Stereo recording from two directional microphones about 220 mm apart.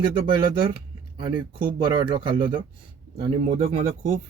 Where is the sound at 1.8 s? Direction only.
20° right (ahead or behind).